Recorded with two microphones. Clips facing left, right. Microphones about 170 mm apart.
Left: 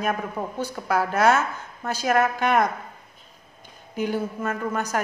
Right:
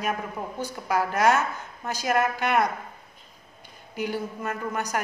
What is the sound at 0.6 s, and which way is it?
Speech, 10° right (ahead or behind).